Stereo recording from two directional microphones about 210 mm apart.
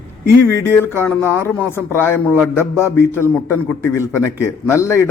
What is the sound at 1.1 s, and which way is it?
Speech, 10° left (ahead or behind).